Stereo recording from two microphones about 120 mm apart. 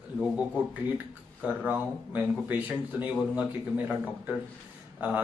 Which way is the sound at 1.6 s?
15° right (ahead or behind).